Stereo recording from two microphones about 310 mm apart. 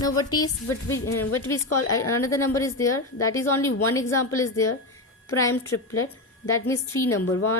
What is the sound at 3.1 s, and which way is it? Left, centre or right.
Speech, left.